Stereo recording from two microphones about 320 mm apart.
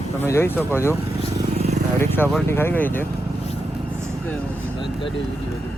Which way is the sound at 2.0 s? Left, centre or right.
Centre.